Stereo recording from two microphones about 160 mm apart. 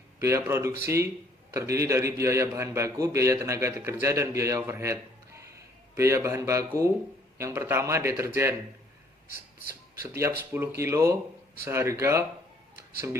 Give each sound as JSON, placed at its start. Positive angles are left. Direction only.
{"t": 0.2, "sound": "a man's voice", "side_deg": -15}
{"t": 10.0, "sound": "a man's voice", "side_deg": -15}